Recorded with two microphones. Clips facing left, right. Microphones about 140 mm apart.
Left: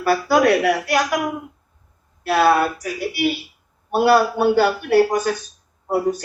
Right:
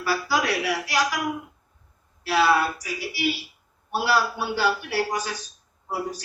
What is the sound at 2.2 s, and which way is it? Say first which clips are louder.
A man's voice: left 5 dB; 55° left (ahead or behind).